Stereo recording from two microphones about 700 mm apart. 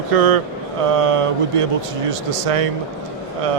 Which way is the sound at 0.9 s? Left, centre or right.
Right.